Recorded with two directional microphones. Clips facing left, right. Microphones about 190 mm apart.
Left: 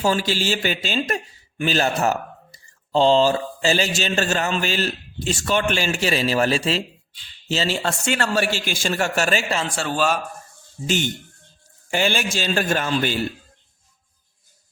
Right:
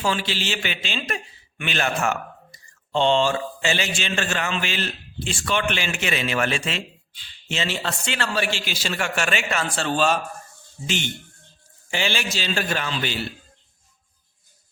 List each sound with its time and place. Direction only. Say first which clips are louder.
0.0 s a man's voice: left 4 dB; 40° left (ahead or behind)
9.6 s a man's voice: even; 10° left (ahead or behind)
10.8 s a man's voice: left 5 dB; 40° left (ahead or behind)